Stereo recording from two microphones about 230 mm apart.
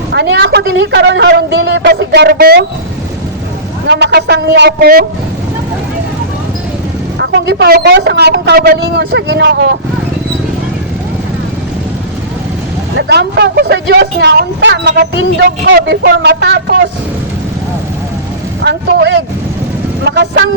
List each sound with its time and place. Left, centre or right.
0.1 s a woman's voice: right
3.8 s a woman's voice: right
7.2 s a woman's voice: right
13.0 s a woman's voice: right
18.6 s a man's voice: right